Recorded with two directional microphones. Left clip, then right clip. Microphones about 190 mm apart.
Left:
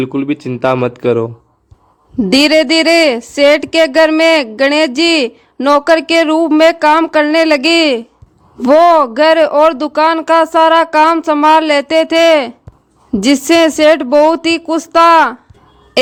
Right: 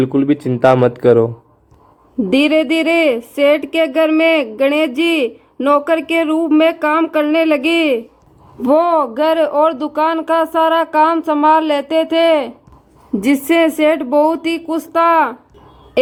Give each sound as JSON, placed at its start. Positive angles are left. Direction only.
{"t": 0.0, "sound": "speech", "side_deg": 10}
{"t": 2.3, "sound": "speech", "side_deg": 45}